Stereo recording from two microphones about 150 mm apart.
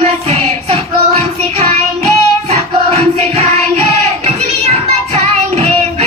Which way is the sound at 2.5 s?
45° right (ahead or behind).